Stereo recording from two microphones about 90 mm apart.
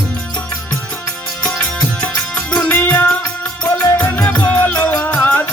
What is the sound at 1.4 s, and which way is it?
Music, 15° left (ahead or behind).